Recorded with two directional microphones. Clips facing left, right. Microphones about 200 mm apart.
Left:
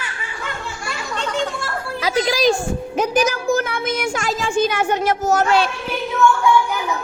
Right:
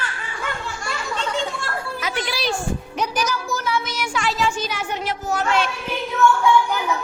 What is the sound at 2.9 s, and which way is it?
Speech, 50° left (ahead or behind).